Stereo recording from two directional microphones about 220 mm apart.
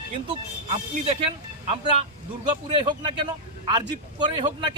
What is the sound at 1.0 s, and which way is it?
Speech, 25° right (ahead or behind).